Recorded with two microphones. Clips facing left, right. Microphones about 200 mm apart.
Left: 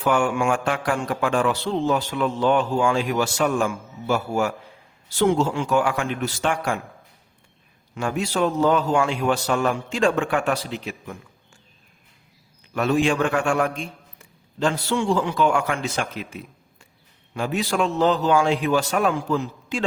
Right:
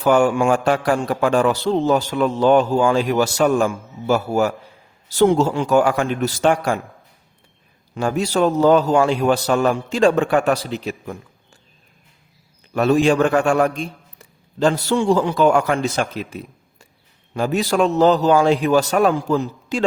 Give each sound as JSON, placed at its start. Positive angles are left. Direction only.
{"t": 0.0, "sound": "a man's voice", "side_deg": -40}
{"t": 7.9, "sound": "a man's voice", "side_deg": -40}
{"t": 12.7, "sound": "a man's voice", "side_deg": -40}